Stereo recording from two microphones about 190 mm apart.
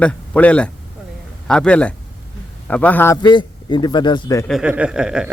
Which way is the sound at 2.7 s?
5° left (ahead or behind).